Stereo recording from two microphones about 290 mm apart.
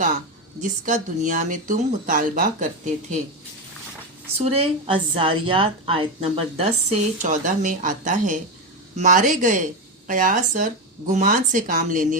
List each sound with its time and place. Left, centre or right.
0.6 s a woman's voice: right
4.4 s a woman's voice: right